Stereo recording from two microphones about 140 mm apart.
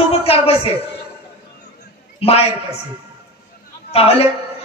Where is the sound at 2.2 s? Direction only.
45° left (ahead or behind).